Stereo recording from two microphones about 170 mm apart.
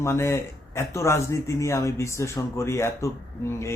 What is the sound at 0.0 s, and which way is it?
Speech, 15° left (ahead or behind).